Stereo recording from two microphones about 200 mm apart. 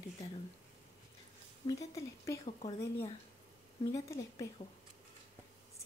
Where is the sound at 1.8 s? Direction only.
15° left (ahead or behind).